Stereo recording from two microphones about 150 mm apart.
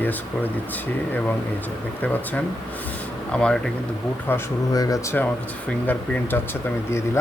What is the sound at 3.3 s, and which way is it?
Speech, 5° left (ahead or behind).